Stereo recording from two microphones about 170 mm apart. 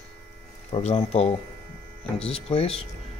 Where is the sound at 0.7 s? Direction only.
35° left (ahead or behind).